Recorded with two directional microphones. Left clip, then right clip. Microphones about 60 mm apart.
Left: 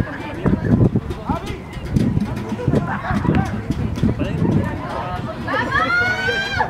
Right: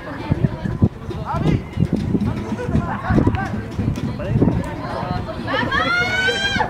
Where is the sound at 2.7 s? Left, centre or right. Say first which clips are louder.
Even; left.